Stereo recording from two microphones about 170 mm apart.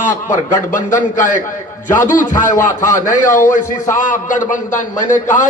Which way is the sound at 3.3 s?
50° left (ahead or behind).